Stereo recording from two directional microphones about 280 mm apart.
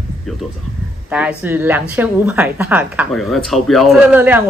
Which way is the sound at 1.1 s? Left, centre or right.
Centre.